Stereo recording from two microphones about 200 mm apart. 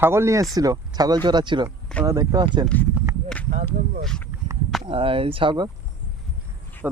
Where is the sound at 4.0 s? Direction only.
5° left (ahead or behind).